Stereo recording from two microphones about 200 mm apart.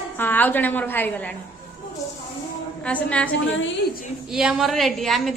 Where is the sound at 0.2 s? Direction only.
10° left (ahead or behind).